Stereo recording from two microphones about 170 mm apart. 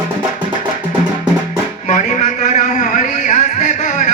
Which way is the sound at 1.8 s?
45° left (ahead or behind).